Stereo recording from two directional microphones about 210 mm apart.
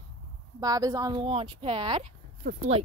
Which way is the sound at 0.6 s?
15° right (ahead or behind).